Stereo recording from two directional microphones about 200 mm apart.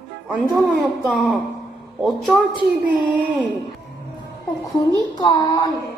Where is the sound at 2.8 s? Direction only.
5° right (ahead or behind).